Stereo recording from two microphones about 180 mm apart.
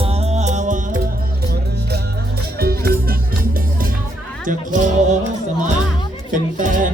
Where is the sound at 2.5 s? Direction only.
60° right (ahead or behind).